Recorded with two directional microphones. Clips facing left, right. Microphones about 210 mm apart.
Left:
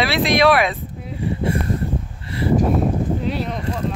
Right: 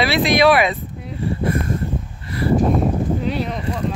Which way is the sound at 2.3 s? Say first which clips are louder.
Right 1 dB; 30° left (ahead or behind).